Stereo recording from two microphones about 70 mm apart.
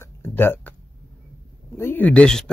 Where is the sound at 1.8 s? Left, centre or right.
Left.